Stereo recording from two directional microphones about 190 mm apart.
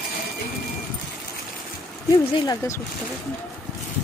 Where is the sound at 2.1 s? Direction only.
15° left (ahead or behind).